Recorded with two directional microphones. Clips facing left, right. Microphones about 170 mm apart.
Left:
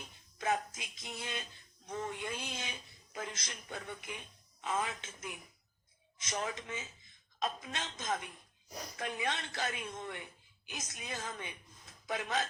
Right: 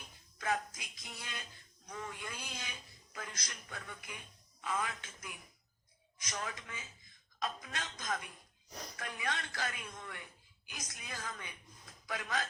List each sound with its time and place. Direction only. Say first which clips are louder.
0.3 s a man's voice: left 2 dB; 25° left (ahead or behind)